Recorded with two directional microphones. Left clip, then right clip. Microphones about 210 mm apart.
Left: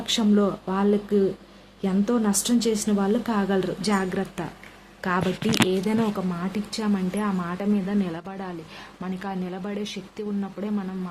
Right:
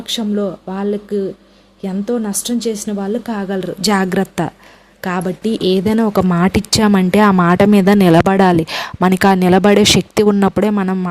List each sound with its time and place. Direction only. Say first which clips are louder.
0.1 s a woman's voice: right 4 dB; 20° right (ahead or behind)
3.8 s speech: right 10 dB; 45° right (ahead or behind)
5.0 s speech: right 6 dB; 35° right (ahead or behind)
6.3 s speech: right 16 dB; 50° right (ahead or behind)